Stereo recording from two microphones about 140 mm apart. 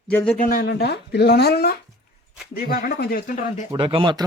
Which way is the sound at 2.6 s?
90° left.